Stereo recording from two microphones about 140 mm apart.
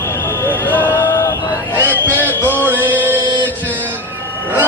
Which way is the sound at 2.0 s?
15° left (ahead or behind).